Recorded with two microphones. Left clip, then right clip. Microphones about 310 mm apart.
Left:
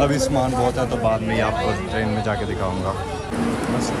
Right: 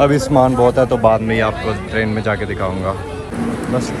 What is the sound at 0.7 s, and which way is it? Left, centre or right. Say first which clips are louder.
Speech: right 8 dB; centre.